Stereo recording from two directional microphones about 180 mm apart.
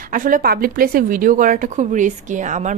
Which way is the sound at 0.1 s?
50° right (ahead or behind).